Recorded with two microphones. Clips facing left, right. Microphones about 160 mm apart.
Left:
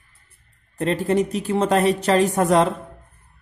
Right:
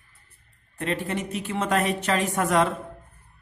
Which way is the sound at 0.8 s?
35° left (ahead or behind).